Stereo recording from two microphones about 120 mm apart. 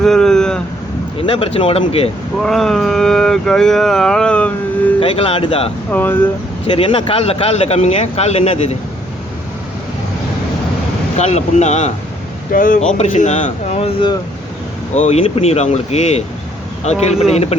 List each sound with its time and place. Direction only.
0.0 s vehicle: 5° left (ahead or behind)
1.3 s speech: 50° left (ahead or behind)
2.4 s speech: 5° left (ahead or behind)
4.9 s speech: 50° left (ahead or behind)
5.9 s speech: 15° left (ahead or behind)
6.7 s speech: 50° left (ahead or behind); by 8.7 s 65° left (ahead or behind)
11.2 s speech: 70° left (ahead or behind)
12.9 s speech: 90° left; by 14.1 s 55° left (ahead or behind)
14.9 s speech: 70° left (ahead or behind)
15.2 s speech: 55° left (ahead or behind)